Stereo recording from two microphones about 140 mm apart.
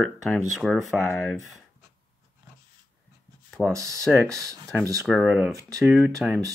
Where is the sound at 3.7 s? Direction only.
20° right (ahead or behind).